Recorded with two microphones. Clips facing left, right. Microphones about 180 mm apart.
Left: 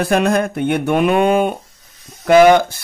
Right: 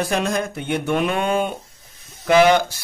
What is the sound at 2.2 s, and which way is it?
Mantra, 50° left (ahead or behind).